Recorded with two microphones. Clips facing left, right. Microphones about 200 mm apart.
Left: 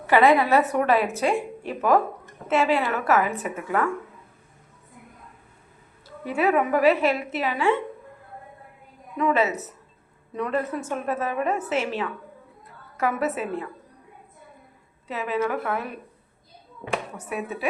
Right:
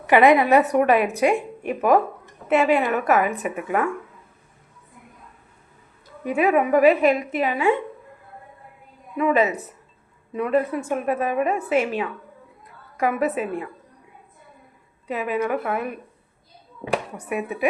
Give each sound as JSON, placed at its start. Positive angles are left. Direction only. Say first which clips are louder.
{"t": 0.1, "sound": "a woman's voice", "louder": "right 3 dB", "side_deg": -15}
{"t": 6.2, "sound": "a woman's voice", "louder": "right 3 dB", "side_deg": -15}
{"t": 9.1, "sound": "a woman's voice", "louder": "right 3 dB", "side_deg": -10}
{"t": 15.0, "sound": "a woman's voice", "louder": "right 2 dB", "side_deg": -10}
{"t": 17.2, "sound": "a woman's voice", "louder": "right 4 dB", "side_deg": -15}